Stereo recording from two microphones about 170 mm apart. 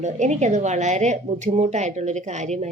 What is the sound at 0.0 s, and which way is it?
A woman's voice, 45° right (ahead or behind).